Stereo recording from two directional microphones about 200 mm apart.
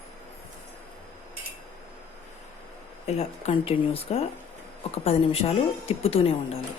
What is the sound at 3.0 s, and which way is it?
Speech, 35° left (ahead or behind).